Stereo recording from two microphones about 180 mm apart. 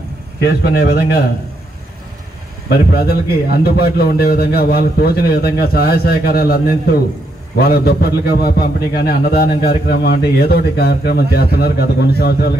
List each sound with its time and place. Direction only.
0.4 s a man's voice: 60° left (ahead or behind)
2.7 s a man's voice: 60° left (ahead or behind)